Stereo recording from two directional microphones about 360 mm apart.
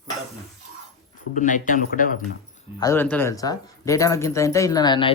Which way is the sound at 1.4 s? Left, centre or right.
Left.